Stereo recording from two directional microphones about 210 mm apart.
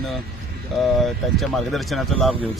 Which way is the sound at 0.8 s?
Centre (ahead or behind).